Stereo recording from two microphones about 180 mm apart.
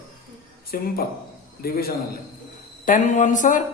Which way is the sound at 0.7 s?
55° left (ahead or behind).